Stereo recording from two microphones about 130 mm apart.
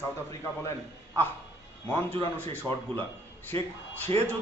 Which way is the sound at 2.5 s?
15° left (ahead or behind).